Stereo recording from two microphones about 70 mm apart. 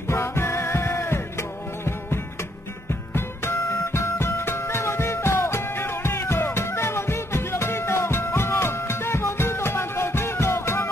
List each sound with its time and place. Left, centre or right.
0.1 s music: left
2.9 s music: left